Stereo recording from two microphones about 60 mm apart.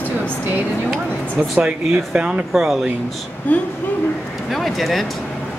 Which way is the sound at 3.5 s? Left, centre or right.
Left.